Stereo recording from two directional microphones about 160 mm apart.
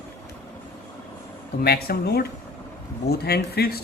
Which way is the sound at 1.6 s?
75° left (ahead or behind).